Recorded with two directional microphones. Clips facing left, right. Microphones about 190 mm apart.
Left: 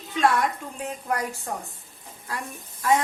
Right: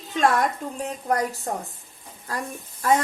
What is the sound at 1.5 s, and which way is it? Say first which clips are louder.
Speech: right 3 dB; 35° right (ahead or behind).